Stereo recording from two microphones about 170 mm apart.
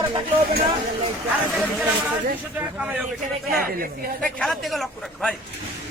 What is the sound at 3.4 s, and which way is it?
Speech, 60° right (ahead or behind).